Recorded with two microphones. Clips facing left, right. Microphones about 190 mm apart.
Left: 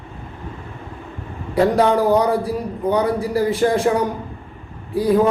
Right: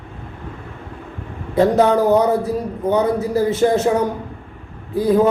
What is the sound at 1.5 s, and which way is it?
Speech, 25° right (ahead or behind).